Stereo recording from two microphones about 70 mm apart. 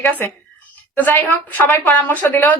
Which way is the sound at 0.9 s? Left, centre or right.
Left.